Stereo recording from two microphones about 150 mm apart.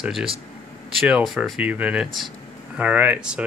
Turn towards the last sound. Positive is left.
turn(degrees=-10)  # may be behind; listen again after turning